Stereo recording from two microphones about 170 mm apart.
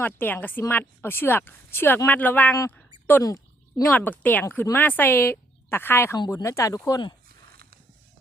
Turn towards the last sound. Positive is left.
turn(degrees=20)  # may be behind; listen again after turning